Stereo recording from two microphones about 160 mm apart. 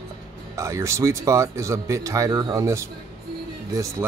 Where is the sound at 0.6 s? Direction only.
20° right (ahead or behind).